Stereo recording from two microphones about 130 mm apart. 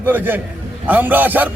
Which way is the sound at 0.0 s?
15° right (ahead or behind).